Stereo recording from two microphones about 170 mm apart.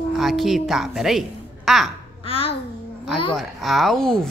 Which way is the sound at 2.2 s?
35° left (ahead or behind).